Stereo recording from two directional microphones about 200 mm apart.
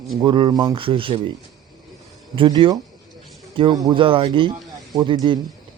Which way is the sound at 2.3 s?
25° right (ahead or behind).